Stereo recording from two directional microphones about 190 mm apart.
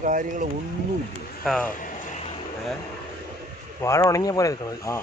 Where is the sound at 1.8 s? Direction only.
40° left (ahead or behind).